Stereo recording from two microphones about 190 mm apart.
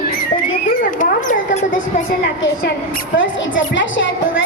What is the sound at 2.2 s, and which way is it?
Speech, 65° left (ahead or behind).